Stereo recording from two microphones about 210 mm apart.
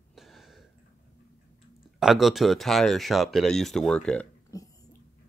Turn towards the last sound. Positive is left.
turn(degrees=15)  # may be behind; listen again after turning